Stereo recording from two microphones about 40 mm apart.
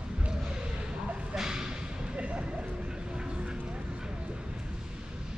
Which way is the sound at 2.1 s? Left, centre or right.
Right.